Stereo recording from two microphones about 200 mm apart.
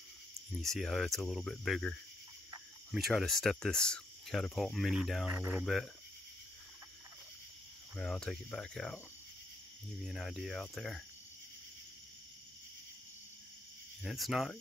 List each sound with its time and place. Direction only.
0.6 s speech: centre (ahead or behind)
7.9 s speech: 5° left (ahead or behind)
10.0 s speech: centre (ahead or behind)
14.0 s speech: centre (ahead or behind)